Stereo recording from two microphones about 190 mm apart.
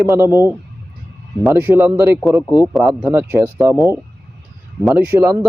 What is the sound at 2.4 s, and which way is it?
Speech, 15° left (ahead or behind).